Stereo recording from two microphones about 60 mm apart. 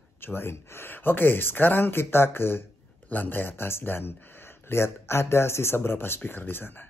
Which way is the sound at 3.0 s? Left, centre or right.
Left.